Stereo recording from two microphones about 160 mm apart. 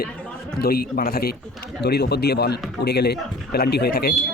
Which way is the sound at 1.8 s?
90° left.